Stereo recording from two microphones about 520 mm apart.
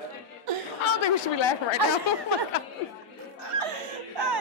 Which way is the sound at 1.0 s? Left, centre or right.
Left.